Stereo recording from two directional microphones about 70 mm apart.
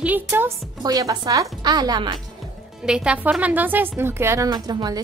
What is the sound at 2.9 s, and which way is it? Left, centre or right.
A woman's voice, centre.